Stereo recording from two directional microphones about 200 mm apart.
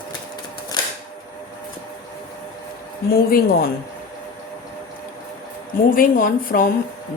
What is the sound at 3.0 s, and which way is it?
Speech, 50° left (ahead or behind).